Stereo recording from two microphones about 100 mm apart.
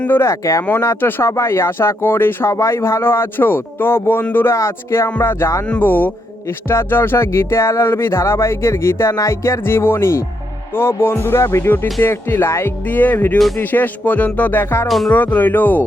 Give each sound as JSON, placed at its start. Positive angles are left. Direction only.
{"t": 0.0, "sound": "speech", "side_deg": 25}
{"t": 5.6, "sound": "speech", "side_deg": 15}
{"t": 13.6, "sound": "music", "side_deg": 20}
{"t": 14.8, "sound": "speech", "side_deg": 0}
{"t": 15.1, "sound": "music", "side_deg": 15}